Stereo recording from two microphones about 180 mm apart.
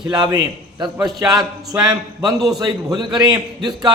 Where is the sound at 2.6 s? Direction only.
20° right (ahead or behind).